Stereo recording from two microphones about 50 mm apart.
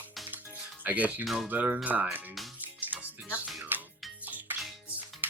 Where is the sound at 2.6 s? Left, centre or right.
Right.